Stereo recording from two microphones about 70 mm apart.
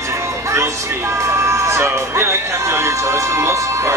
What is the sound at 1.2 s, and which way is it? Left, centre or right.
Speech, right.